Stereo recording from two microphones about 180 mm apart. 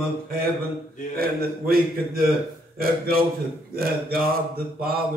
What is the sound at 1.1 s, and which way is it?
Speech, 55° right (ahead or behind).